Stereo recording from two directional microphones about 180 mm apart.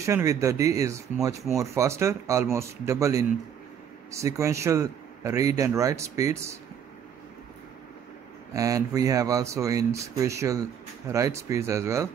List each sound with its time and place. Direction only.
0.0 s speech: 15° right (ahead or behind)
8.5 s speech: 20° right (ahead or behind)